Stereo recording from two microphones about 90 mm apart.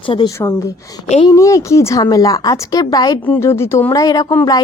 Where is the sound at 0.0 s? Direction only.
70° left (ahead or behind).